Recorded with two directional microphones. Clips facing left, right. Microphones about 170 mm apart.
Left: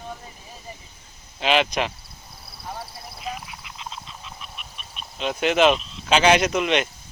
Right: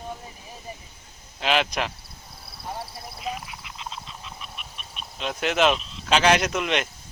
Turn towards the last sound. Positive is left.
turn(degrees=0)  # may be behind; listen again after turning